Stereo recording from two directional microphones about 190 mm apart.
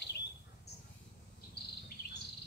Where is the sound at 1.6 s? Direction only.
60° left (ahead or behind).